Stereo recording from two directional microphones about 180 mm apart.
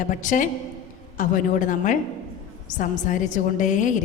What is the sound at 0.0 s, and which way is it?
A woman's voice, 45° left (ahead or behind).